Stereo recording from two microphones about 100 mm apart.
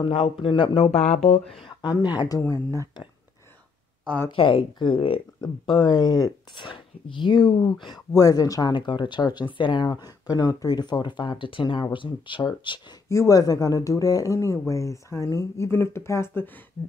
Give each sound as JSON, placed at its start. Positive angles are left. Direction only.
{"t": 0.1, "sound": "speech", "side_deg": 60}
{"t": 1.5, "sound": "speech", "side_deg": 60}
{"t": 1.9, "sound": "speech", "side_deg": 45}
{"t": 2.4, "sound": "speech", "side_deg": 30}
{"t": 4.3, "sound": "speech", "side_deg": 65}
{"t": 8.1, "sound": "speech", "side_deg": 35}
{"t": 13.1, "sound": "speech", "side_deg": 30}